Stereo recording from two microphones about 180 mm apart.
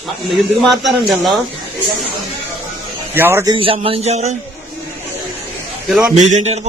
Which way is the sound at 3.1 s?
15° right (ahead or behind).